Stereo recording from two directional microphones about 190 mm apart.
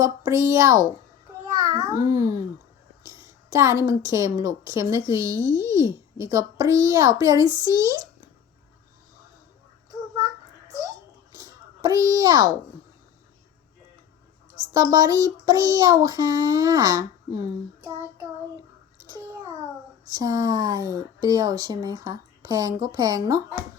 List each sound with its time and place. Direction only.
0.0 s a woman's voice: 15° right (ahead or behind)
7.6 s child singing: 20° right (ahead or behind)
11.8 s child singing: 20° right (ahead or behind)
14.7 s child singing: 20° right (ahead or behind)
20.1 s child singing: 20° right (ahead or behind)